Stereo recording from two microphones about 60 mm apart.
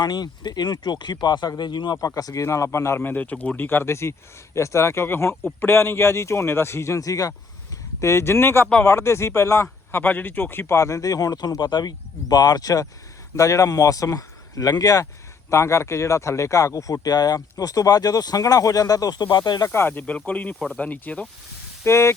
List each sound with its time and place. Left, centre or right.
1.5 s speech: left
3.0 s speech: left
3.6 s speech: left
8.0 s speech: left
9.9 s speech: left
10.8 s speech: left
13.3 s speech: left
15.4 s speech: left
19.6 s speech: left
19.9 s speech: left
21.8 s speech: left